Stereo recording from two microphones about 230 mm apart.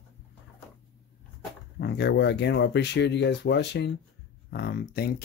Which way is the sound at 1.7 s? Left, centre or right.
Left.